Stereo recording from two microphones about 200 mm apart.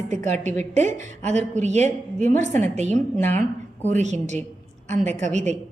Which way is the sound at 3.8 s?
35° right (ahead or behind).